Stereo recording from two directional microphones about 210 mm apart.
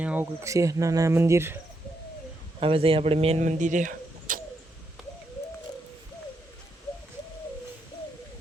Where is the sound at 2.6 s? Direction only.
25° right (ahead or behind).